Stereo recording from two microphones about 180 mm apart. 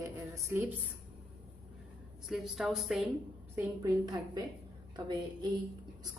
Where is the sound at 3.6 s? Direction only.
20° right (ahead or behind).